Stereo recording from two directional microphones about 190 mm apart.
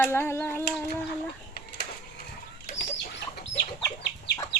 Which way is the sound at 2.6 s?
70° left (ahead or behind).